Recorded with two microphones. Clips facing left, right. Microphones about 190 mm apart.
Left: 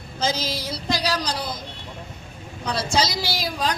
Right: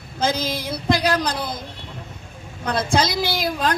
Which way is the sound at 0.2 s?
55° right (ahead or behind).